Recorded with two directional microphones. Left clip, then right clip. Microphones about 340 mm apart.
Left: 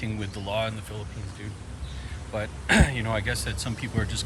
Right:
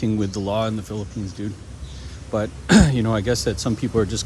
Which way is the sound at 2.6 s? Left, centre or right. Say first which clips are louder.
Right 4 dB; centre.